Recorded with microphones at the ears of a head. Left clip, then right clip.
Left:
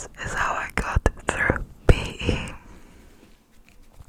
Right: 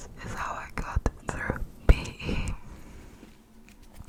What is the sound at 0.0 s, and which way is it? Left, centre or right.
Whispering, left.